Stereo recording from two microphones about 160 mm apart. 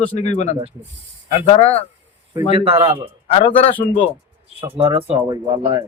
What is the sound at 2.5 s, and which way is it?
Speech, 35° right (ahead or behind).